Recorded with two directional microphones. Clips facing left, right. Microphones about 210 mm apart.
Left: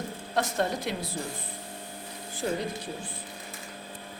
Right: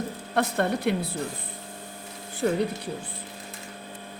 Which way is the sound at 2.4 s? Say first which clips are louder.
Right 5 dB; 70° right (ahead or behind).